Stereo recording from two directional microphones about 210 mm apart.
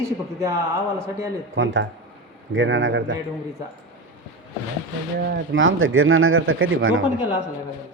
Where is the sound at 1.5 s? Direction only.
65° right (ahead or behind).